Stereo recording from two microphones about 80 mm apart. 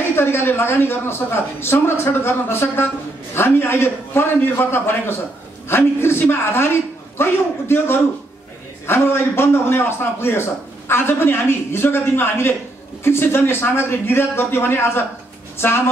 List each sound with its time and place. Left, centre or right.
0.1 s a man's voice: left